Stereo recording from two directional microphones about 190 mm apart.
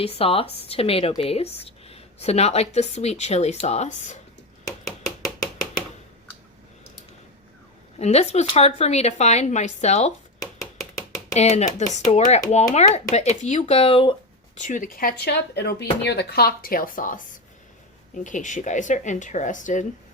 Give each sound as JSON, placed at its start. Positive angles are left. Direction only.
{"t": 0.0, "sound": "speech", "side_deg": 30}
{"t": 4.9, "sound": "a sound", "side_deg": 0}
{"t": 7.9, "sound": "speech", "side_deg": 35}
{"t": 11.3, "sound": "speech", "side_deg": 35}
{"t": 14.6, "sound": "speech", "side_deg": 45}